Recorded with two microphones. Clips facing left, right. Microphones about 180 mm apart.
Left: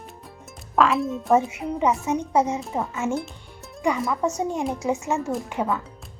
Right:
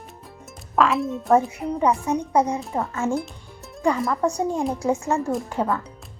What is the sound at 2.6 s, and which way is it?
Speech, centre (ahead or behind).